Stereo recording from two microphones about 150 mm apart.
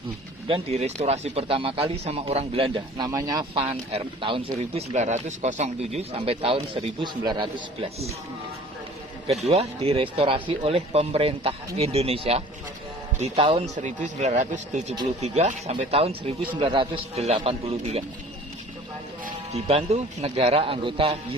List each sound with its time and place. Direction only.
0.4 s speech: 40° right (ahead or behind)
3.1 s speech: 20° right (ahead or behind)
3.5 s speech: 40° right (ahead or behind)
9.5 s speech: 40° right (ahead or behind)
13.7 s speech: 55° right (ahead or behind)
19.5 s speech: 45° right (ahead or behind)